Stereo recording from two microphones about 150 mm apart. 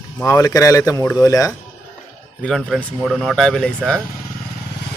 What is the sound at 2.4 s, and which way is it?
Speech, 5° left (ahead or behind).